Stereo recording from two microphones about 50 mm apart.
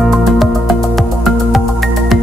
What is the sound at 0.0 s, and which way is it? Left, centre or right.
Music, centre.